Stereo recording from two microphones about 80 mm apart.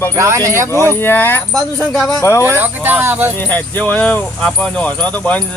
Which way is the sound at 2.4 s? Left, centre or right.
Right.